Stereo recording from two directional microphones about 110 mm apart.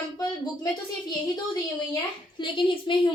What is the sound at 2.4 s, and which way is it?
Speech, 50° left (ahead or behind).